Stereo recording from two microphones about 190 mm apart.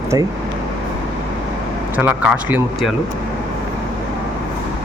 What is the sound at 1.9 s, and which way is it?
Speech, 5° right (ahead or behind).